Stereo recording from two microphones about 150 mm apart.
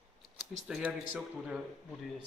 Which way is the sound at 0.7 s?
5° right (ahead or behind).